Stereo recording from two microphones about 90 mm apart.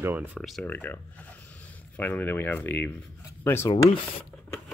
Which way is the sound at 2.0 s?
20° left (ahead or behind).